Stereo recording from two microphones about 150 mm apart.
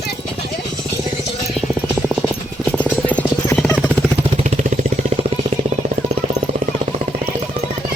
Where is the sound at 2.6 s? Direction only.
10° left (ahead or behind).